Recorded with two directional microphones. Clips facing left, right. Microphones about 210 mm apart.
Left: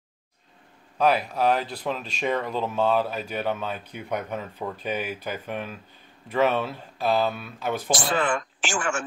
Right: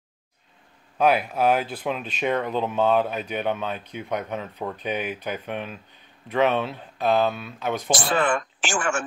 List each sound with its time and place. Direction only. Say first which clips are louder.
0.9 s speech: right 2 dB; centre (ahead or behind)
8.2 s speech: right 2 dB; 55° right (ahead or behind)